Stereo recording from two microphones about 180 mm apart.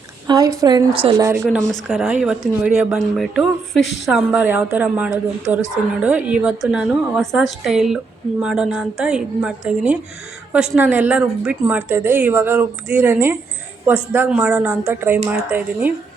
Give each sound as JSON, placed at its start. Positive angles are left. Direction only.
{"t": 0.3, "sound": "a woman's voice", "side_deg": -20}
{"t": 1.2, "sound": "speech", "side_deg": -15}
{"t": 1.5, "sound": "a woman's voice", "side_deg": 0}